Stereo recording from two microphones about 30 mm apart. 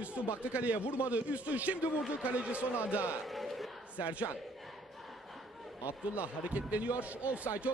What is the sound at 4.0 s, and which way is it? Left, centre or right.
Speech, right.